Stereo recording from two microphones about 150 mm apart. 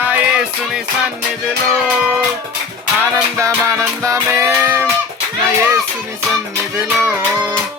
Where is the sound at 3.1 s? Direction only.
20° right (ahead or behind).